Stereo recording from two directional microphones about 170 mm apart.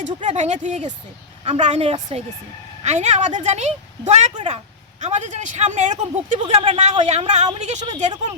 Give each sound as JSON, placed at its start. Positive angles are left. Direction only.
{"t": 0.0, "sound": "a woman's voice", "side_deg": -45}